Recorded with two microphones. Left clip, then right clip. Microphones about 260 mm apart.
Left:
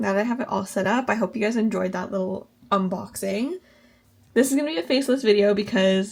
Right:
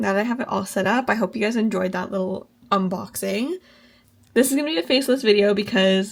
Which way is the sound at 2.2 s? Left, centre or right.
Right.